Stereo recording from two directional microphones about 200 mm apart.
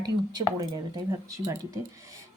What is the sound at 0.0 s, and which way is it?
Speech, 20° right (ahead or behind).